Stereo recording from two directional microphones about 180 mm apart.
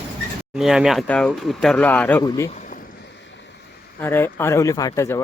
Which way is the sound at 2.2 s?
25° left (ahead or behind).